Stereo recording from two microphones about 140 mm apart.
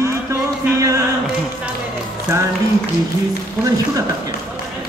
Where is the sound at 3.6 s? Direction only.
25° right (ahead or behind).